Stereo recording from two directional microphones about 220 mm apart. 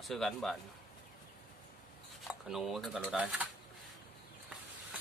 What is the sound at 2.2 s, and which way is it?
Speech, centre (ahead or behind).